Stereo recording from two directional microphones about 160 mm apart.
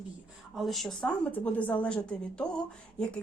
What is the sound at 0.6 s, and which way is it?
A woman's voice, centre (ahead or behind).